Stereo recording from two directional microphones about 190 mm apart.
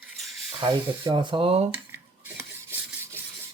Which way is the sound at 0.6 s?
25° right (ahead or behind).